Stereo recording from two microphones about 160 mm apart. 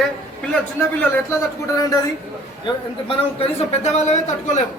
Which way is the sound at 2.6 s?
35° left (ahead or behind).